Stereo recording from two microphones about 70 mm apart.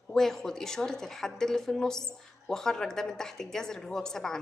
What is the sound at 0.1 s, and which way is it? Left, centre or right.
A woman's voice, centre.